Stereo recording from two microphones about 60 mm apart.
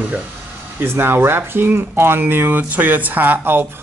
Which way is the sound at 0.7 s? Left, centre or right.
Right.